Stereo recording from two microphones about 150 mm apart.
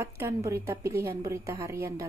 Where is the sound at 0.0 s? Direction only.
20° right (ahead or behind).